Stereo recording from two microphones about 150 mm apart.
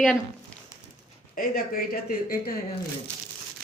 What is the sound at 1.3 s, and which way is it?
Speech, 75° left (ahead or behind).